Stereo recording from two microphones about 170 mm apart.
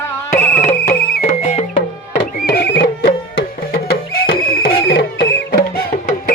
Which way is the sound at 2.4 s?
70° left (ahead or behind).